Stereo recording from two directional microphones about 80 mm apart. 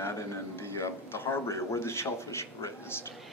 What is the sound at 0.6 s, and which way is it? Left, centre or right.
A man's voice, left.